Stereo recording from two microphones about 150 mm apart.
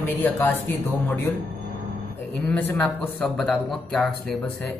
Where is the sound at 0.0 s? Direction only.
15° left (ahead or behind).